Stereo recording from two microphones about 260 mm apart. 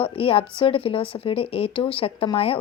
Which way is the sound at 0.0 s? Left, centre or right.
Left.